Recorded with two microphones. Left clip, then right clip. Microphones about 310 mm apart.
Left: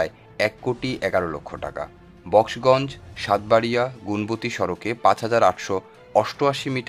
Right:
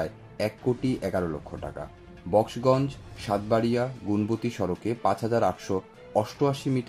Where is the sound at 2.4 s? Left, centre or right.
Left.